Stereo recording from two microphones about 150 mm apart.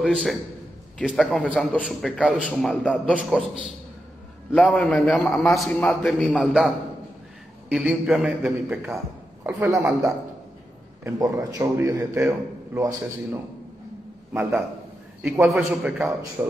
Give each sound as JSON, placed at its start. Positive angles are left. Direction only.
{"t": 0.0, "sound": "a man's voice", "side_deg": 0}
{"t": 2.7, "sound": "a man's voice", "side_deg": 5}
{"t": 4.6, "sound": "a man's voice", "side_deg": 10}
{"t": 6.3, "sound": "a man's voice", "side_deg": -5}
{"t": 7.7, "sound": "a man's voice", "side_deg": -5}
{"t": 8.5, "sound": "a man's voice", "side_deg": -15}
{"t": 15.2, "sound": "a man's voice", "side_deg": 0}
{"t": 16.0, "sound": "a man's voice", "side_deg": -15}